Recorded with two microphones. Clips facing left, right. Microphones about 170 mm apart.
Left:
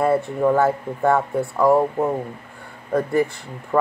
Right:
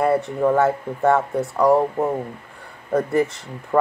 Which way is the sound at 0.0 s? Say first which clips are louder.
Even; centre (ahead or behind).